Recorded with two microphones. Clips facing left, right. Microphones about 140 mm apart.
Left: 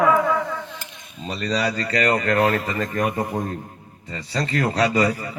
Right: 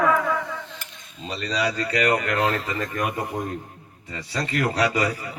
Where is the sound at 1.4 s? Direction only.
40° left (ahead or behind).